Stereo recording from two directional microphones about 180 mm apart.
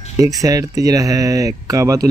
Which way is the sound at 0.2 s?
20° right (ahead or behind).